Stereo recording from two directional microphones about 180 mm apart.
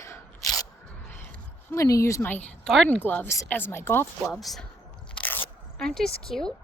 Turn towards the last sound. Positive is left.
turn(degrees=5)  # may be behind; listen again after turning